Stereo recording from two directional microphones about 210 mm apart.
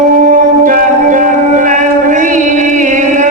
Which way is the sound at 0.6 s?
35° right (ahead or behind).